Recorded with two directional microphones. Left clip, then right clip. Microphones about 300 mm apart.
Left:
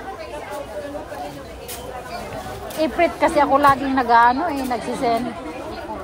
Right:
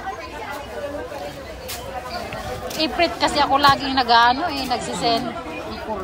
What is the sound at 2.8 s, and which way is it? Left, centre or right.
Speech, centre.